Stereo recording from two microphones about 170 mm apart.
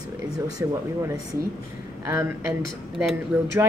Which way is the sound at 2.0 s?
15° right (ahead or behind).